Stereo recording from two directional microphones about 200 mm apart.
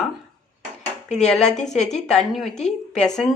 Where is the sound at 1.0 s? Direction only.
35° left (ahead or behind).